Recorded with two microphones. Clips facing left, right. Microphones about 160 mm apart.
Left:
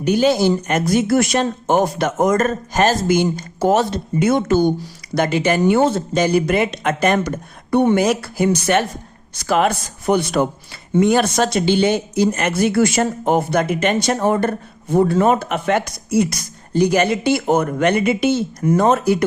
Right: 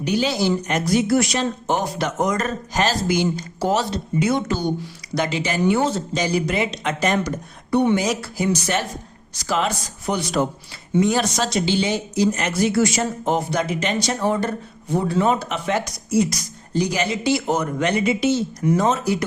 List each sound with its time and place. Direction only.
0.0 s a man's voice: 50° left (ahead or behind)